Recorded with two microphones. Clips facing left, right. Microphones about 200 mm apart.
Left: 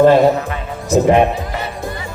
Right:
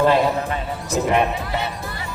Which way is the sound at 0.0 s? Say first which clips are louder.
Left 7 dB; 45° left (ahead or behind).